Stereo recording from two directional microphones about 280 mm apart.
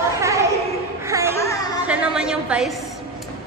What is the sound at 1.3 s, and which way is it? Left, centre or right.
Music, centre.